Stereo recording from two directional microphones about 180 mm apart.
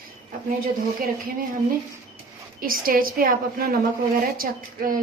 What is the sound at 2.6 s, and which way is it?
A woman's voice, 50° right (ahead or behind).